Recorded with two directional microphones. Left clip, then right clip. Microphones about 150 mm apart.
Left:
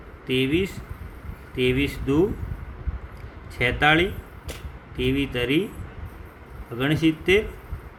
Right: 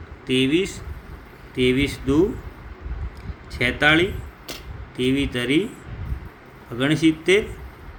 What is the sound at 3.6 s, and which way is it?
Speech, 15° right (ahead or behind).